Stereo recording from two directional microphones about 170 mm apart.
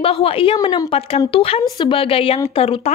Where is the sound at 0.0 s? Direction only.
35° left (ahead or behind).